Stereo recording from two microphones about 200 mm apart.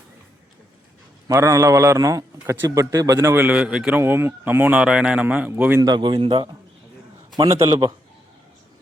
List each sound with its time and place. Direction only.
1.3 s a man's voice: 15° right (ahead or behind)